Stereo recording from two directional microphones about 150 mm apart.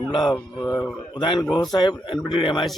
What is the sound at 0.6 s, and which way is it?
Speech, 10° left (ahead or behind).